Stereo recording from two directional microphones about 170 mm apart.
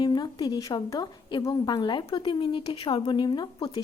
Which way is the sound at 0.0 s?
25° left (ahead or behind).